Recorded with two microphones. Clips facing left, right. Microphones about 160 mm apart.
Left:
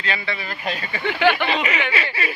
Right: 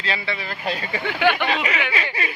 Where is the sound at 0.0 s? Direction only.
30° right (ahead or behind).